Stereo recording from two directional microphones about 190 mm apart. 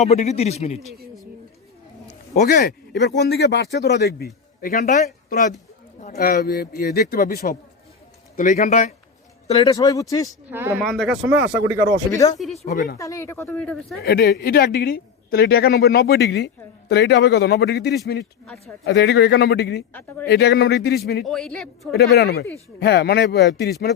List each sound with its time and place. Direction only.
0.0 s a man's voice: 35° left (ahead or behind)
2.3 s speech: 45° left (ahead or behind)
4.6 s a man's voice: 40° left (ahead or behind)
9.5 s speech: 20° left (ahead or behind)
10.5 s speech: 10° right (ahead or behind)
10.8 s speech: centre (ahead or behind)
12.1 s speech: 20° left (ahead or behind)
12.5 s a man's voice: 40° left (ahead or behind)
13.0 s speech: 15° left (ahead or behind)
14.0 s speech: 55° left (ahead or behind)
19.9 s speech: 10° left (ahead or behind)
20.2 s speech: 60° left (ahead or behind)
21.2 s speech: centre (ahead or behind)
21.9 s speech: 55° left (ahead or behind)